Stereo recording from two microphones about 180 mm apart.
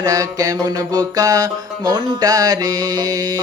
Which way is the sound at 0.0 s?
20° right (ahead or behind).